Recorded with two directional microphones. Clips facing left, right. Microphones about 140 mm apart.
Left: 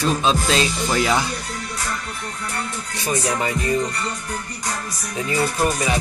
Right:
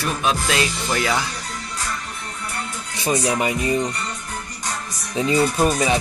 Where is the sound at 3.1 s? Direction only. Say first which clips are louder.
Right 2 dB; 15° right (ahead or behind).